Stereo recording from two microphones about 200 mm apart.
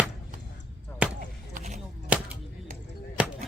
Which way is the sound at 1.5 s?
35° right (ahead or behind).